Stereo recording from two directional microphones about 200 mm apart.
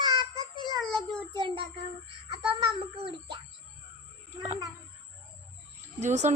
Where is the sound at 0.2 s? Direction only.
20° left (ahead or behind).